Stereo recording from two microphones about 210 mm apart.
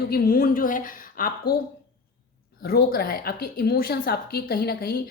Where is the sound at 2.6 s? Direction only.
45° left (ahead or behind).